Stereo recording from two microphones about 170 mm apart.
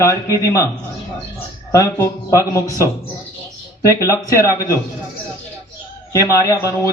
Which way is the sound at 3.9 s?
20° left (ahead or behind).